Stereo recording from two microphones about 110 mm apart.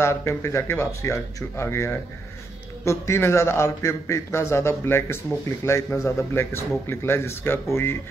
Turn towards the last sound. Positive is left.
turn(degrees=20)  # may be behind; listen again after turning